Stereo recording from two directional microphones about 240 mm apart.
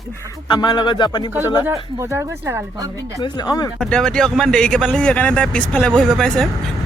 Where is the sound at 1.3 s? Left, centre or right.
Centre.